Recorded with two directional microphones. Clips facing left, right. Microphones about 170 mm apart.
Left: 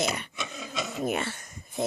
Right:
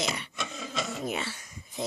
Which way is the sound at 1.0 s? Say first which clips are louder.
Left 4 dB; 55° left (ahead or behind).